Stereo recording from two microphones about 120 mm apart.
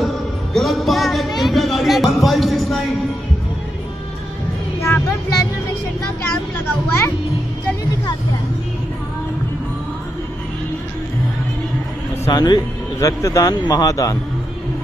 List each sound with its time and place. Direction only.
0.0 s music: centre (ahead or behind)
4.8 s vehicle: 25° left (ahead or behind)
12.3 s speech: 35° left (ahead or behind)